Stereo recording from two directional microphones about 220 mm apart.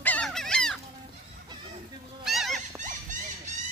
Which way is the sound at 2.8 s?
35° right (ahead or behind).